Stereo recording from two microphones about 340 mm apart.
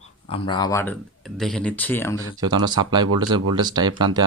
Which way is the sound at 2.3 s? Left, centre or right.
Centre.